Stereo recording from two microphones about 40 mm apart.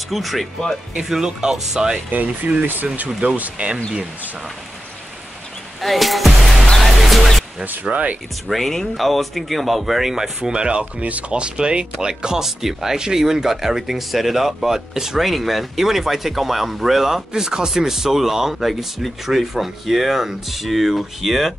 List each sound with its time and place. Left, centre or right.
0.1 s speech: centre
2.0 s speech: right
5.8 s music: centre
7.8 s speech: right
8.5 s speech: centre